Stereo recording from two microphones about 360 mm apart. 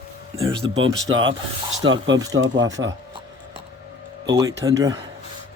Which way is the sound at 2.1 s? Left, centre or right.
Centre.